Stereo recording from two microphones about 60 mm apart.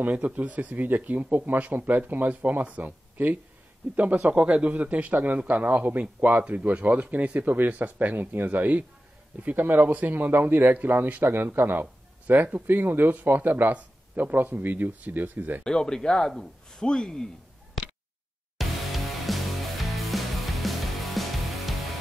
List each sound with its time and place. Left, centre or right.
0.0 s speech: right
11.8 s speech: right
15.6 s speech: centre
18.6 s music: centre